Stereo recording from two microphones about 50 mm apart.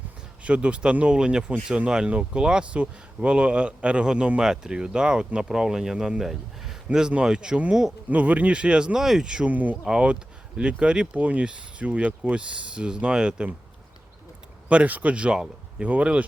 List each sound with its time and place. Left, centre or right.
0.4 s speech: right
8.1 s speech: right
9.0 s speech: centre
9.5 s speech: right
10.6 s speech: right
14.7 s speech: right